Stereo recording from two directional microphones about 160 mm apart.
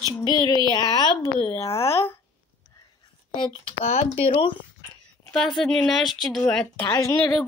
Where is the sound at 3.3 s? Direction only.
30° left (ahead or behind).